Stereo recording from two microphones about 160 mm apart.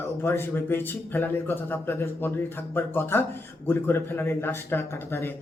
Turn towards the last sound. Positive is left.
turn(degrees=15)  # may be behind; listen again after turning